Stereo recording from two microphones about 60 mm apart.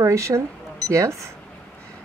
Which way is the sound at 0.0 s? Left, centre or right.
Right.